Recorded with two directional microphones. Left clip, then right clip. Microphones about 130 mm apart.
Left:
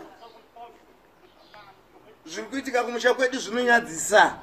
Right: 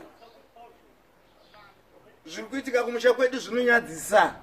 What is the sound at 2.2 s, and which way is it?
A man's voice, 15° right (ahead or behind).